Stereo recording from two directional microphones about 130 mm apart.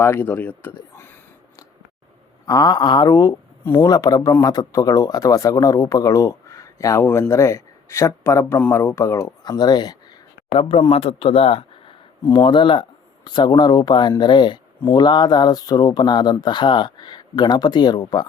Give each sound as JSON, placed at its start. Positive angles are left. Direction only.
{"t": 0.0, "sound": "speech", "side_deg": 15}
{"t": 2.5, "sound": "speech", "side_deg": 30}
{"t": 3.8, "sound": "speech", "side_deg": 30}
{"t": 10.5, "sound": "speech", "side_deg": 45}
{"t": 12.3, "sound": "speech", "side_deg": 35}